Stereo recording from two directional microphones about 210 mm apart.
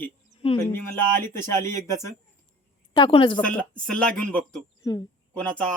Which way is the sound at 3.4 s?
5° left (ahead or behind).